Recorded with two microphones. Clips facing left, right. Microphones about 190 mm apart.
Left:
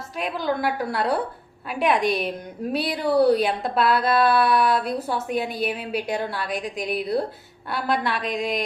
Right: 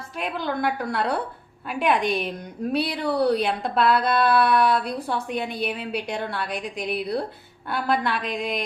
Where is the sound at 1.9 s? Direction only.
45° left (ahead or behind).